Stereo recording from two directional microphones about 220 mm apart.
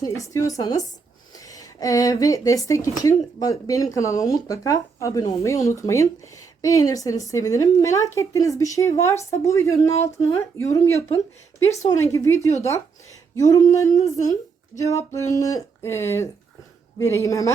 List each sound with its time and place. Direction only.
0.0 s a woman's voice: 15° left (ahead or behind)
11.9 s a woman's voice: 15° left (ahead or behind)